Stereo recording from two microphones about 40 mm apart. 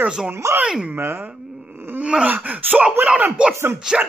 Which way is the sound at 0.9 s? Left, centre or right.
Right.